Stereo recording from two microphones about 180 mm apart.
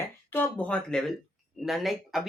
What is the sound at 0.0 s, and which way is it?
Speech, 10° left (ahead or behind).